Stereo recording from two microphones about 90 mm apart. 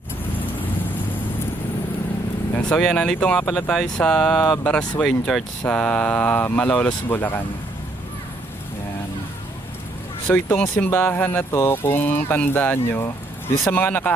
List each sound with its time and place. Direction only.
2.6 s speech: 10° left (ahead or behind)
10.2 s speech: 25° left (ahead or behind)